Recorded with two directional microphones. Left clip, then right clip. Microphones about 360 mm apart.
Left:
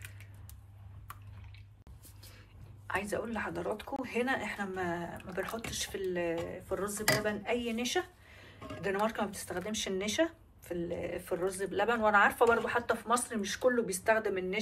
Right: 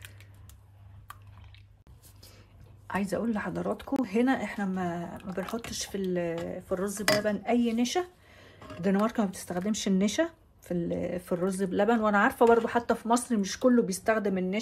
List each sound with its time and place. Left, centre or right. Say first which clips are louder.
2.9 s speech: right 4 dB; right